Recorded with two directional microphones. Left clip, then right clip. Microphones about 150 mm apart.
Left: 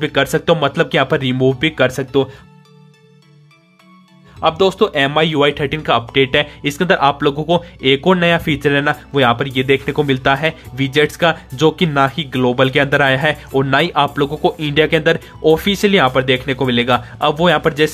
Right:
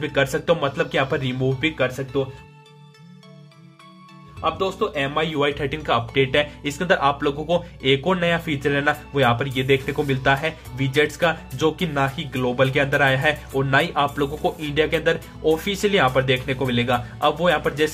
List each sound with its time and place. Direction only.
0.0 s speech: 35° left (ahead or behind); by 2.2 s 60° left (ahead or behind)
4.4 s speech: 80° left
4.9 s speech: 50° left (ahead or behind)